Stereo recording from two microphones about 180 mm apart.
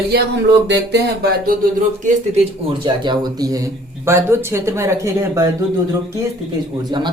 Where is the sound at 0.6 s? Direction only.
70° right (ahead or behind).